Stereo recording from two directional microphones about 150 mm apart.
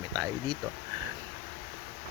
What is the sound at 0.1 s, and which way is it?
Speech, 25° right (ahead or behind).